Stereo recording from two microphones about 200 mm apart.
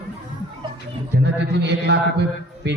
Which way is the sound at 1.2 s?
60° right (ahead or behind).